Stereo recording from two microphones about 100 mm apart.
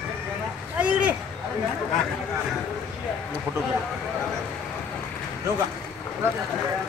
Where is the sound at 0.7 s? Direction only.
15° right (ahead or behind).